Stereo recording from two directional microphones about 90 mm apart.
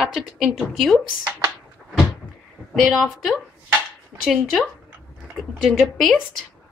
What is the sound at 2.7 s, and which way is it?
A woman's voice, centre (ahead or behind).